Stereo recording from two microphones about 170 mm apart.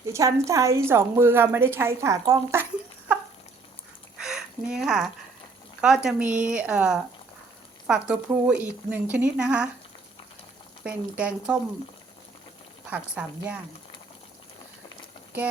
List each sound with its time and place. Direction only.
0.0 s a woman's voice: 20° right (ahead or behind)
4.2 s a sound: 5° right (ahead or behind)
5.8 s a woman's voice: 5° right (ahead or behind)
10.8 s a woman's voice: 5° right (ahead or behind)
12.9 s a woman's voice: 10° right (ahead or behind)